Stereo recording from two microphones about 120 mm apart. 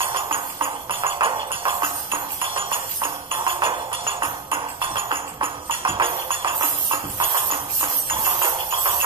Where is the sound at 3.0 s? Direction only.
20° right (ahead or behind).